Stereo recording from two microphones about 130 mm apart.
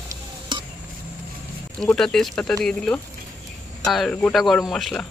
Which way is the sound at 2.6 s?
5° left (ahead or behind).